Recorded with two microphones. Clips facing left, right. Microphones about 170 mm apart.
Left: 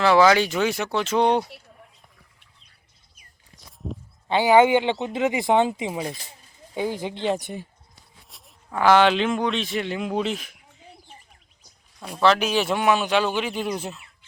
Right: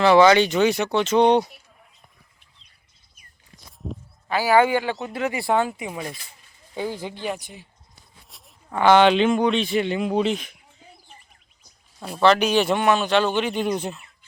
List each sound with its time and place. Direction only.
0.0 s speech: centre (ahead or behind)
3.8 s speech: centre (ahead or behind)
4.3 s speech: 25° left (ahead or behind)
7.3 s speech: 60° left (ahead or behind)
8.3 s speech: centre (ahead or behind)
11.9 s speech: centre (ahead or behind)